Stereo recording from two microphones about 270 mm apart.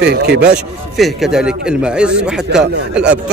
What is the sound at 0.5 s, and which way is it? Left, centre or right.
A man's voice, centre.